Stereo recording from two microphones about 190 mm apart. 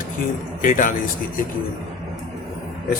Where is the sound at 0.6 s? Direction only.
45° left (ahead or behind).